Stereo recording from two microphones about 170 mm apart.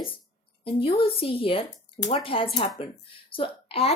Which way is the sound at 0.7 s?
30° left (ahead or behind).